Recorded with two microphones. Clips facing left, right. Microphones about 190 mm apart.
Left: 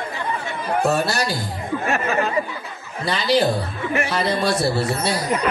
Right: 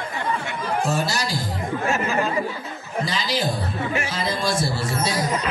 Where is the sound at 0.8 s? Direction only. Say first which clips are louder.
Left 7 dB; 65° left (ahead or behind).